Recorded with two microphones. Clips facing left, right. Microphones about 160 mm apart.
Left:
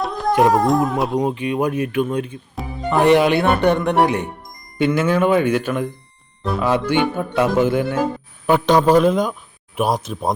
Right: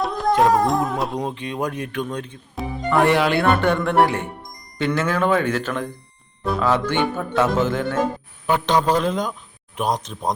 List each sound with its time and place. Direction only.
0.0 s music: centre (ahead or behind)
0.4 s speech: centre (ahead or behind)
2.9 s speech: 20° left (ahead or behind)
4.8 s music: 15° left (ahead or behind)